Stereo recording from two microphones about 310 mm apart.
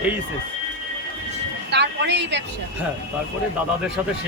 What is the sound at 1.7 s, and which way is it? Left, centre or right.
Speech, right.